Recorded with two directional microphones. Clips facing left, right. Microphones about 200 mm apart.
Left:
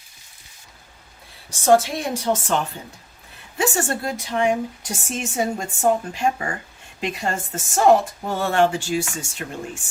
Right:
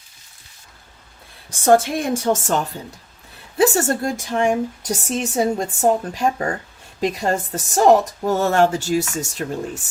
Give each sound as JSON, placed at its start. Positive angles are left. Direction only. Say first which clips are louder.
{"t": 1.5, "sound": "a woman's voice", "louder": "right 2 dB", "side_deg": -55}
{"t": 3.6, "sound": "a woman's voice", "louder": "right 6 dB", "side_deg": -40}